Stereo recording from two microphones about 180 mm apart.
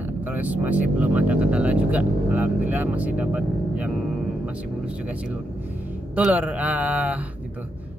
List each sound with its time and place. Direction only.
0.3 s speech: 10° right (ahead or behind)
6.1 s speech: 5° right (ahead or behind)